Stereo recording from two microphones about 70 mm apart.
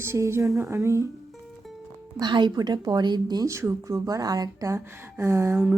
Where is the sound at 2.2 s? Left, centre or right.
Right.